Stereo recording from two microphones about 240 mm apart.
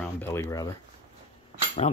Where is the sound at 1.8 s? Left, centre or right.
Left.